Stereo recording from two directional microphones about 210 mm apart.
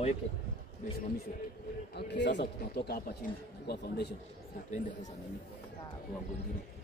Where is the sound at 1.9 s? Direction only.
55° left (ahead or behind).